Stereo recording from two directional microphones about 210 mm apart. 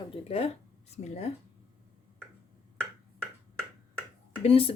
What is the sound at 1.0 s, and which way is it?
Speech, 30° left (ahead or behind).